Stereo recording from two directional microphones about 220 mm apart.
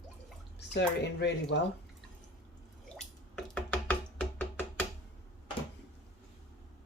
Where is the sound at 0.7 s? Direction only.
50° left (ahead or behind).